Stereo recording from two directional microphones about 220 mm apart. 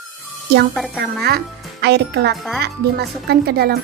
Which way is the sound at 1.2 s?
50° right (ahead or behind).